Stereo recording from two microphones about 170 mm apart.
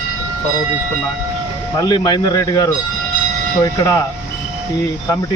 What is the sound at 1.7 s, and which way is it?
Speech, 25° left (ahead or behind).